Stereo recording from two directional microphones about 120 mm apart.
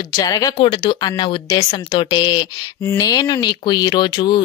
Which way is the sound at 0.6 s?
50° left (ahead or behind).